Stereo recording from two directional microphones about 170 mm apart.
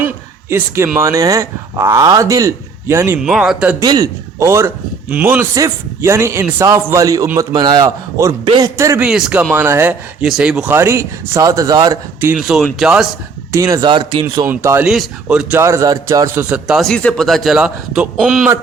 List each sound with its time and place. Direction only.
0.9 s speech: 20° right (ahead or behind)
3.2 s a man's voice: centre (ahead or behind)
3.8 s a man's voice: 20° right (ahead or behind)
9.0 s a man's voice: 5° right (ahead or behind); by 12.3 s 20° right (ahead or behind)
12.3 s a man's voice: 5° right (ahead or behind)
13.5 s speech: 20° right (ahead or behind)
14.4 s a man's voice: 15° right (ahead or behind)